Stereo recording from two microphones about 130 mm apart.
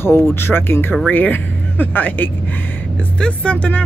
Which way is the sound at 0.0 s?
15° left (ahead or behind).